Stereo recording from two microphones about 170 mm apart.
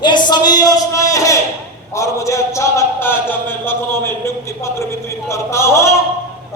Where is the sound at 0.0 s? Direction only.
25° left (ahead or behind).